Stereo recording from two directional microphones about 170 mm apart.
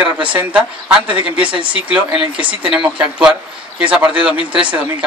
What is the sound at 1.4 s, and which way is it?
Speech, 30° right (ahead or behind).